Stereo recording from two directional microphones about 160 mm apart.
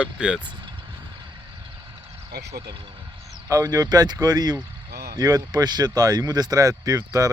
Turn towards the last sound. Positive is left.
turn(degrees=-20)  # may be behind; listen again after turning